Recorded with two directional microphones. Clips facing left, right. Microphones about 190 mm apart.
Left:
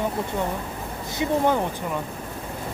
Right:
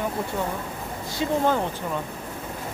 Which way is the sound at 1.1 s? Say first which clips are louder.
Left 1 dB; 15° left (ahead or behind).